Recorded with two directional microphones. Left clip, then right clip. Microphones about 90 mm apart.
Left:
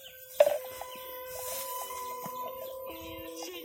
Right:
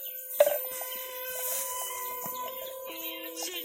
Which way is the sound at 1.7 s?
15° left (ahead or behind).